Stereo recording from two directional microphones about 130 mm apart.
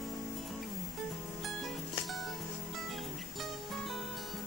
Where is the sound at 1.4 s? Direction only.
Centre (ahead or behind).